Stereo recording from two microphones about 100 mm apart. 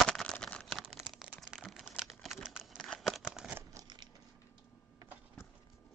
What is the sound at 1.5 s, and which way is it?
Crumpling, 5° right (ahead or behind).